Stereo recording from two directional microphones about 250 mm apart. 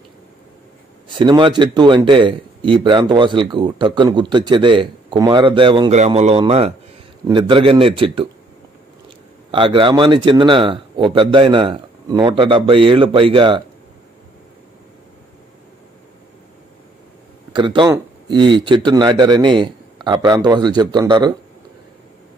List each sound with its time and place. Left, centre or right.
1.0 s a man's voice: centre
9.5 s a man's voice: centre
17.6 s speech: centre